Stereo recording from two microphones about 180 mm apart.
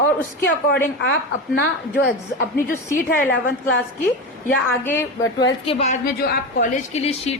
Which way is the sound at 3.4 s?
55° left (ahead or behind).